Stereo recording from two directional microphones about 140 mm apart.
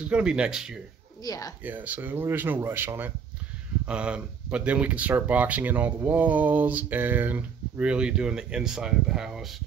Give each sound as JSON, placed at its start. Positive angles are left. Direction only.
{"t": 0.0, "sound": "speech", "side_deg": -5}
{"t": 1.2, "sound": "speech", "side_deg": 25}
{"t": 1.6, "sound": "speech", "side_deg": -10}